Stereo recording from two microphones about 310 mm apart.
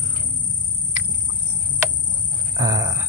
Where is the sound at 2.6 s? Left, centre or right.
Centre.